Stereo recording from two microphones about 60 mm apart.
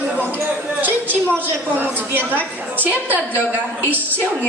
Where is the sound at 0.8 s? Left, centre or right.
Right.